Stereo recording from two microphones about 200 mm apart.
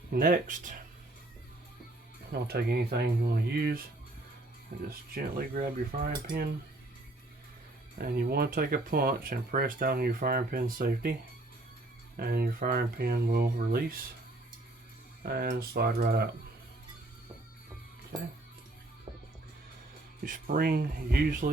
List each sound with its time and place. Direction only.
0.1 s speech: 45° right (ahead or behind)
2.3 s speech: 50° right (ahead or behind)
4.9 s speech: 45° right (ahead or behind)
7.9 s speech: 50° right (ahead or behind)
15.2 s speech: 50° right (ahead or behind)
20.2 s speech: 45° right (ahead or behind)